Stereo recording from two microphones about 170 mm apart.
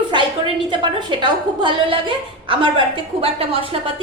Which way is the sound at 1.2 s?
30° right (ahead or behind).